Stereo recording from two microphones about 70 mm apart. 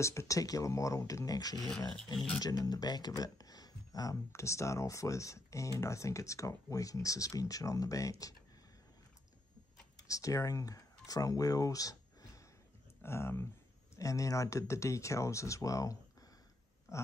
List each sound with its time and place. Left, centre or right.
0.0 s speech: left
4.3 s speech: left
10.0 s speech: left
13.0 s speech: left
13.9 s speech: left